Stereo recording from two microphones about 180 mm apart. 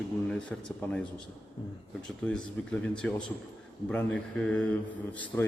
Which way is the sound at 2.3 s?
5° left (ahead or behind).